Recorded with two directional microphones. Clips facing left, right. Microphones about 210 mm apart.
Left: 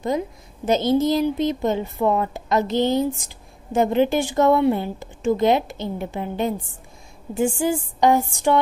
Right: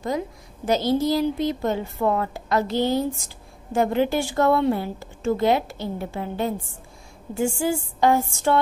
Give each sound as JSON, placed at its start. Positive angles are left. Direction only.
{"t": 0.7, "sound": "a woman's voice", "side_deg": 20}